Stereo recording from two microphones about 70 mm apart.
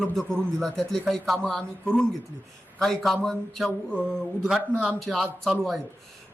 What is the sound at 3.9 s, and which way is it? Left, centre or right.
Speech, centre.